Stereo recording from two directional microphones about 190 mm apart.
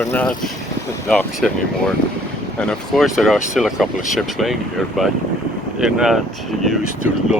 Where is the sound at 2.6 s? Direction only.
Centre (ahead or behind).